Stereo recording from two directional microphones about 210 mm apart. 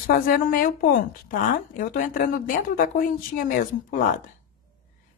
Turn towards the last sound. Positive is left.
turn(degrees=40)  # may be behind; listen again after turning